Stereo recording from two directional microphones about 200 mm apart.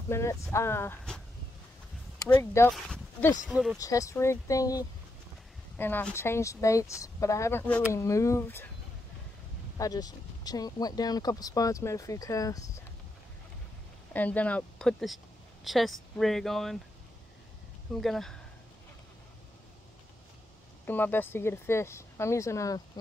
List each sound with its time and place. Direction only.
0.1 s speech: 15° left (ahead or behind)
2.7 s speech: centre (ahead or behind)
3.7 s speech: 15° left (ahead or behind)
9.8 s speech: 20° left (ahead or behind)
14.1 s speech: 10° left (ahead or behind)
18.0 s speech: centre (ahead or behind)
20.8 s speech: 10° left (ahead or behind)